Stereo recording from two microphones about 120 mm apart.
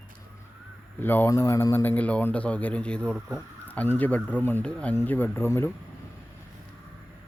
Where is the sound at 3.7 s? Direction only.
15° left (ahead or behind).